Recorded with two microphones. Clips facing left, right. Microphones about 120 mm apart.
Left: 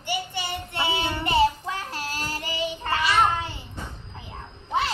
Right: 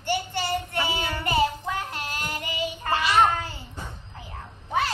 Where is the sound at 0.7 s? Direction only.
25° left (ahead or behind).